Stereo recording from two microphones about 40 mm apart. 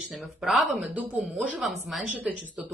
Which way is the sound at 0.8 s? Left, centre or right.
Right.